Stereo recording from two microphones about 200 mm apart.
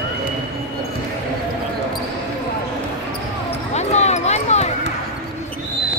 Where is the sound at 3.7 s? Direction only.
35° left (ahead or behind).